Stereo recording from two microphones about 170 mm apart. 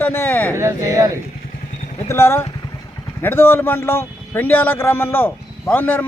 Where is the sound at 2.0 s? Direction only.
15° left (ahead or behind).